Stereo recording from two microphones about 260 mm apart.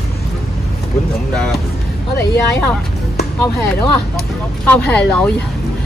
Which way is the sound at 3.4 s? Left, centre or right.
Centre.